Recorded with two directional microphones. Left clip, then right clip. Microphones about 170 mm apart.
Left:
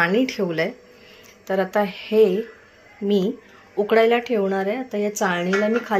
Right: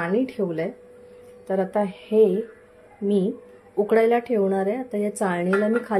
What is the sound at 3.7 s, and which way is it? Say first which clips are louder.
Speech: left 2 dB; 25° right (ahead or behind).